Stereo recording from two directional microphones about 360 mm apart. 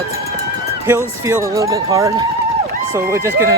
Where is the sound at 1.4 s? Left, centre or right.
Centre.